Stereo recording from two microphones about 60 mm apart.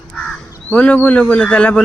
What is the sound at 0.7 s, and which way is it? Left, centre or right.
Speech, left.